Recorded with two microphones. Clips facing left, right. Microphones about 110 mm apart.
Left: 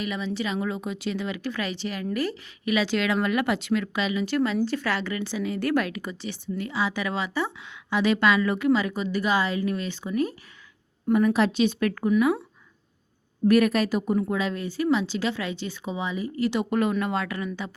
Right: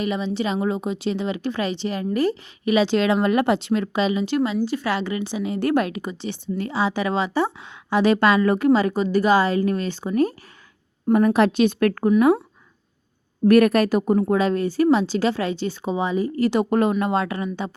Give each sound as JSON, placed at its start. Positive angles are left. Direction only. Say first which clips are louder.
{"t": 0.0, "sound": "a woman's voice", "louder": "right 5 dB", "side_deg": -25}
{"t": 11.1, "sound": "speech", "louder": "right 4 dB", "side_deg": -50}
{"t": 13.4, "sound": "a woman's voice", "louder": "right 5 dB", "side_deg": -50}